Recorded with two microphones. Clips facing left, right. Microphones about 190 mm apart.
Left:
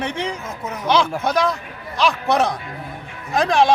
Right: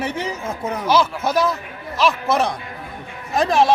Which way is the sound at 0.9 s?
5° right (ahead or behind).